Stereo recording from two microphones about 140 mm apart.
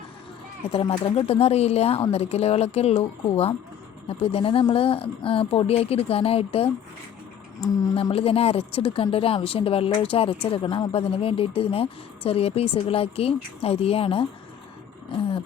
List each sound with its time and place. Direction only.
0.7 s a woman's voice: 45° left (ahead or behind)
8.1 s a woman's voice: 45° left (ahead or behind)
15.1 s a sound: 40° left (ahead or behind)